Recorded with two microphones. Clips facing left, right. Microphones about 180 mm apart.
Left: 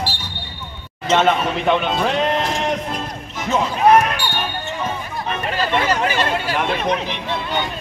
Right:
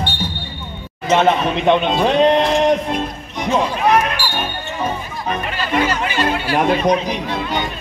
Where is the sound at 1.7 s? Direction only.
20° right (ahead or behind).